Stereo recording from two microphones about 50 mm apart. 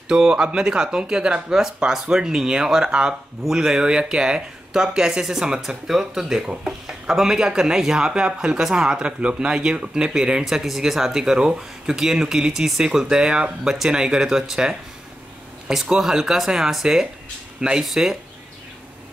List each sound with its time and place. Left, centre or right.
0.1 s speech: centre
9.0 s speech: right
10.4 s speech: centre